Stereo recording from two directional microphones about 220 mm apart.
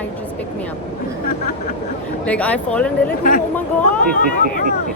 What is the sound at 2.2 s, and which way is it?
Speech, 5° left (ahead or behind).